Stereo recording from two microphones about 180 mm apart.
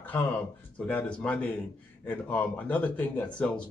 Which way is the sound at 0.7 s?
5° left (ahead or behind).